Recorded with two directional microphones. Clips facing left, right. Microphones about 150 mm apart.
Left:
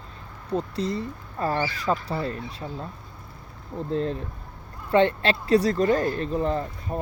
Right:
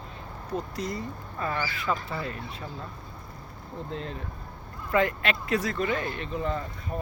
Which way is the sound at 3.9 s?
35° left (ahead or behind).